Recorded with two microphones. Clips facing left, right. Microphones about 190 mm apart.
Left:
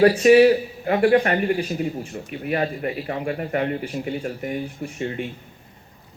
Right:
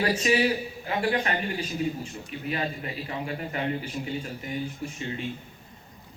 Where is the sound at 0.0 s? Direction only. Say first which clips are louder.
Left 11 dB; 55° left (ahead or behind).